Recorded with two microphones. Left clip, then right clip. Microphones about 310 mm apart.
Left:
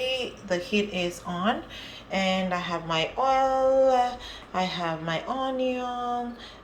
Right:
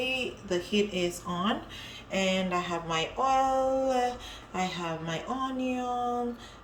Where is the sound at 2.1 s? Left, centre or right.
Centre.